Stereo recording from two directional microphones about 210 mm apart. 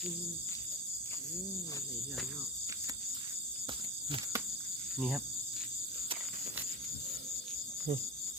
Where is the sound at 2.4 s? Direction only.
15° right (ahead or behind).